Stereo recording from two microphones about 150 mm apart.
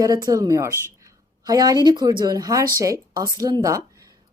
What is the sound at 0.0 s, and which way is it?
A woman's voice, 25° right (ahead or behind).